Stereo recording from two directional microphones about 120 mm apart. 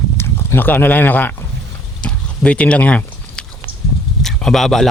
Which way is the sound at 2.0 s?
10° left (ahead or behind).